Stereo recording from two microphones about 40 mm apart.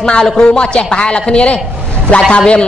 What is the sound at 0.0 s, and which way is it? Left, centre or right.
A woman's voice, left.